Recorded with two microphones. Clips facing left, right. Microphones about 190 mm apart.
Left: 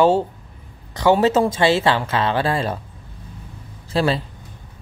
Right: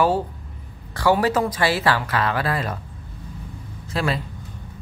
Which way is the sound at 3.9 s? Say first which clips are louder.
Left 5 dB; 30° left (ahead or behind).